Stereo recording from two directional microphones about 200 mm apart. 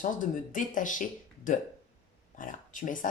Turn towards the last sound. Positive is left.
turn(degrees=40)  # may be behind; listen again after turning